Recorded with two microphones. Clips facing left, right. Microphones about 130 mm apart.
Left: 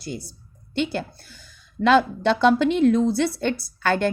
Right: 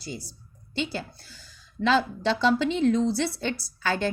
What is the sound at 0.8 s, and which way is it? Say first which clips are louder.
A woman's voice: left 6 dB; 55° left (ahead or behind).